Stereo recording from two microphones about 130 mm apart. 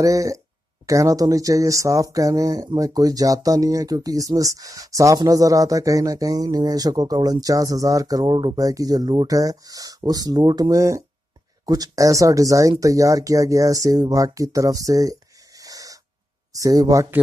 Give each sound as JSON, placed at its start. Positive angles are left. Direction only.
{"t": 0.0, "sound": "speech", "side_deg": -25}